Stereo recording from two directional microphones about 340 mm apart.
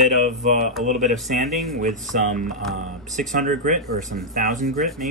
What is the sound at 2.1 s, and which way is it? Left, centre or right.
Speech, right.